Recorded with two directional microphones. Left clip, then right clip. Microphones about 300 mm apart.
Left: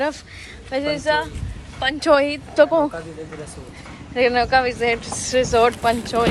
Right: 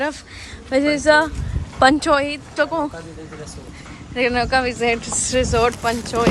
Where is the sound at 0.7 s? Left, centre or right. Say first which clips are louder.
Right 5 dB; centre.